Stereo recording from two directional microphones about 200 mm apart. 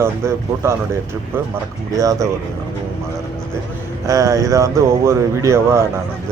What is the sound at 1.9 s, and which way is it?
Speech, 15° right (ahead or behind).